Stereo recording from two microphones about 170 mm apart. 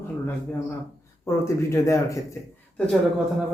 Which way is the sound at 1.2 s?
15° left (ahead or behind).